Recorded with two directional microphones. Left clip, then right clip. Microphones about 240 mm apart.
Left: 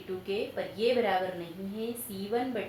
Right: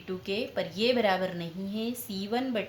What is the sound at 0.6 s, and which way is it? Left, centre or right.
Speech, right.